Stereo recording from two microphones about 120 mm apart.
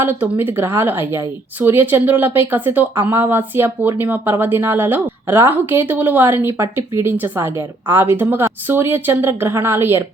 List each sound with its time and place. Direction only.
0.0 s speech: 15° right (ahead or behind)